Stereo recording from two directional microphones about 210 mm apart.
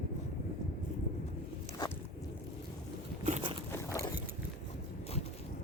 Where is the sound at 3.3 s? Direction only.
30° right (ahead or behind).